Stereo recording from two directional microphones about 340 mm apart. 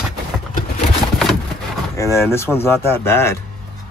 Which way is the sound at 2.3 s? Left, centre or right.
Centre.